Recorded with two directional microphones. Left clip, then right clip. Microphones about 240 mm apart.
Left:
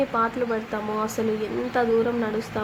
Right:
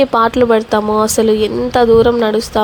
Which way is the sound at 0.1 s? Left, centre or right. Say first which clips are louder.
Right 13 dB; right.